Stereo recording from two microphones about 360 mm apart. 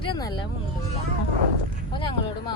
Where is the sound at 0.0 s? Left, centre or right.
Centre.